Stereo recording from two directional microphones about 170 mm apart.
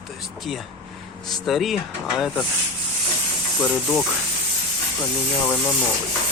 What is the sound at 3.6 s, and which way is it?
Speech, 5° left (ahead or behind).